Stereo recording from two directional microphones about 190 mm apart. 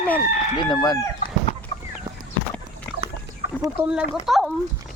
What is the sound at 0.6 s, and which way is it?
Chicken, 20° left (ahead or behind).